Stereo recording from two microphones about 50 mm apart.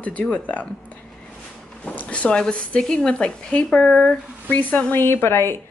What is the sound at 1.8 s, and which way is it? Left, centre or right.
Speech, left.